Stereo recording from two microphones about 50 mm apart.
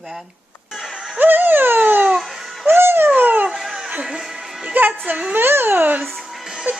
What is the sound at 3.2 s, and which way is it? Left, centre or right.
Dog, right.